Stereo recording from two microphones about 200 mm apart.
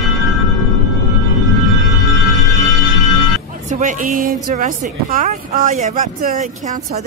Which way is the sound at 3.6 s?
40° right (ahead or behind).